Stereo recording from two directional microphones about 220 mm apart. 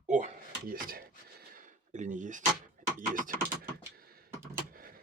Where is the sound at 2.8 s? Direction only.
35° right (ahead or behind).